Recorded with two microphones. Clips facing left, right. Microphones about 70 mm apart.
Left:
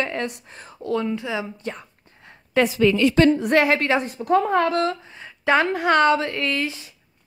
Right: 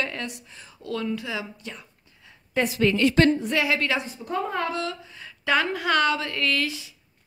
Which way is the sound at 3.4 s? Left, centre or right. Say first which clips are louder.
Left 6 dB; left.